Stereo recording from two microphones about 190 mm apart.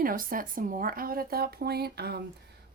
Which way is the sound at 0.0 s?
50° right (ahead or behind).